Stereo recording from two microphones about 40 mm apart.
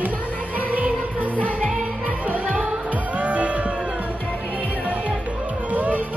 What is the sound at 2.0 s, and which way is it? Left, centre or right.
Music, right.